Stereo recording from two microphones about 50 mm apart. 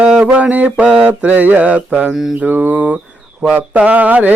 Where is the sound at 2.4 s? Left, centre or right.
Right.